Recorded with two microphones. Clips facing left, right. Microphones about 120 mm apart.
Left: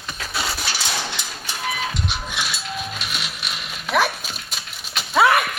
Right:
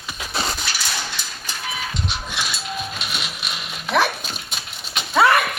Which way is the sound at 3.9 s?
5° left (ahead or behind).